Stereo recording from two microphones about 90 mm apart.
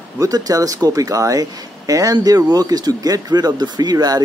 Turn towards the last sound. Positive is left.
turn(degrees=-45)  # may be behind; listen again after turning